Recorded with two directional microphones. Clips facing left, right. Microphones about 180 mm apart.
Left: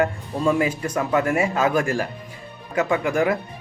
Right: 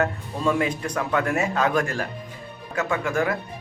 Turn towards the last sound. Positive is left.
turn(degrees=15)  # may be behind; listen again after turning